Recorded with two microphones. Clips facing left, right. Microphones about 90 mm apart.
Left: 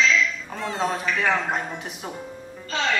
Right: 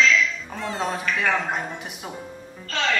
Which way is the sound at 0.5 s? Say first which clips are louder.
Left 1 dB; centre (ahead or behind).